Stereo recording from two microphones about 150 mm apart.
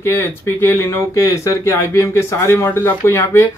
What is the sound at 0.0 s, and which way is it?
Speech, 15° left (ahead or behind).